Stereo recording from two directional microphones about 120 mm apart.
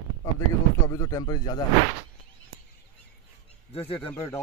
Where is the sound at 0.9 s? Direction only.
30° left (ahead or behind).